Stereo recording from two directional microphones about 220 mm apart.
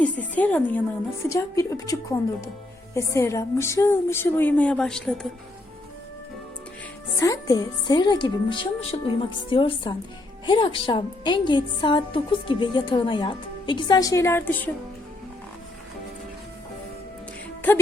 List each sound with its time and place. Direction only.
0.0 s speech: 5° left (ahead or behind)
7.2 s a woman's voice: 15° left (ahead or behind)